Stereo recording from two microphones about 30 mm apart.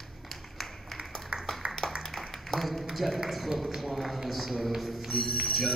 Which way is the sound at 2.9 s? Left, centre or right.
Centre.